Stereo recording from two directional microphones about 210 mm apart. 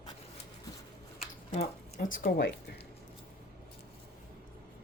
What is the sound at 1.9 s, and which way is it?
Speech, 45° left (ahead or behind).